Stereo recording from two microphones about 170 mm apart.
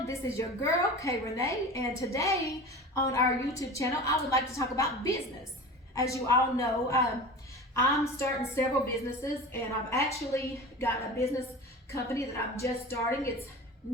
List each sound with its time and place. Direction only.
0.1 s a woman's voice: 15° left (ahead or behind)